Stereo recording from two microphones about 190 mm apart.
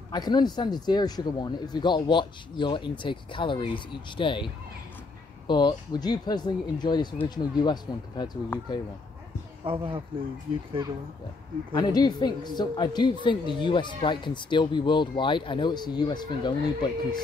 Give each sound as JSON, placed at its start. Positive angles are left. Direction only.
{"t": 0.1, "sound": "speech", "side_deg": 20}
{"t": 5.5, "sound": "speech", "side_deg": 25}
{"t": 9.7, "sound": "speech", "side_deg": -25}
{"t": 11.7, "sound": "speech", "side_deg": 20}